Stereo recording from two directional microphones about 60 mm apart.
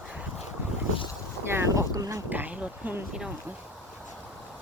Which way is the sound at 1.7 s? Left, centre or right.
Right.